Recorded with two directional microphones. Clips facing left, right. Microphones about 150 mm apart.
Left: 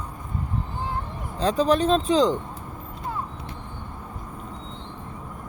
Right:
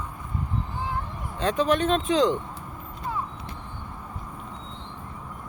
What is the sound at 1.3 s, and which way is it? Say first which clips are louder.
Speech: left 2 dB; 35° left (ahead or behind).